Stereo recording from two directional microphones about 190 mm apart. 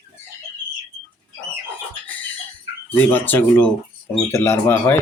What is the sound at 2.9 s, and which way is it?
Speech, 10° left (ahead or behind).